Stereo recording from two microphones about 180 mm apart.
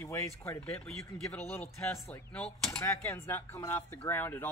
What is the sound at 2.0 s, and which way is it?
Speech, 10° left (ahead or behind).